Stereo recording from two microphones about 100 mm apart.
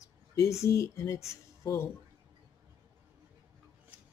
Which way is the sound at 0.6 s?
30° left (ahead or behind).